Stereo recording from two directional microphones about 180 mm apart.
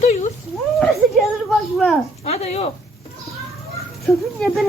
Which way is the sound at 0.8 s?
Centre (ahead or behind).